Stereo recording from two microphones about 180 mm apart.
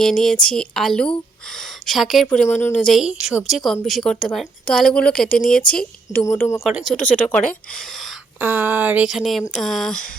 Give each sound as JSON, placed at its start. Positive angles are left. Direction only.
{"t": 0.0, "sound": "speech", "side_deg": 5}
{"t": 6.7, "sound": "speech", "side_deg": 0}
{"t": 8.4, "sound": "speech", "side_deg": -10}